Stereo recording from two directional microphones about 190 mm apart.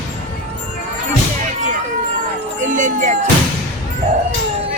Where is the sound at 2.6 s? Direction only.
40° right (ahead or behind).